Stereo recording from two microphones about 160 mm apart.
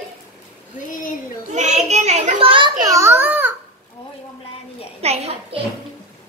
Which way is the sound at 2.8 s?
20° right (ahead or behind).